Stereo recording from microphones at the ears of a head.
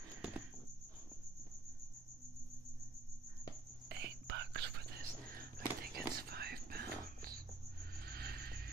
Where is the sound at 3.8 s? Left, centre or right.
Right.